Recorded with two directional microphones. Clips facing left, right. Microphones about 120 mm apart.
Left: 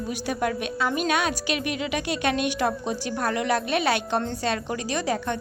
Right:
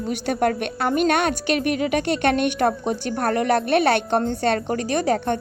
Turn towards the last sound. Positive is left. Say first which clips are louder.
# right 5 dB
turn(degrees=-55)  # may be behind; listen again after turning